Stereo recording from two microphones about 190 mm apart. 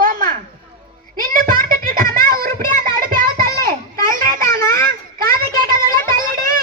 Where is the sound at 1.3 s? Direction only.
50° right (ahead or behind).